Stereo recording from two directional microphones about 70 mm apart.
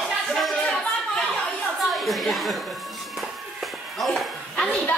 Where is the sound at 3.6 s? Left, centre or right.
Centre.